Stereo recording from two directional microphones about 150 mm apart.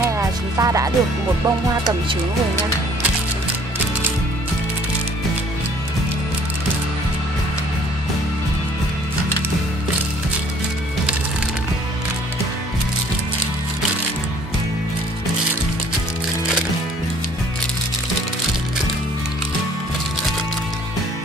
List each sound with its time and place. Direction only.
0.0 s music: 20° right (ahead or behind)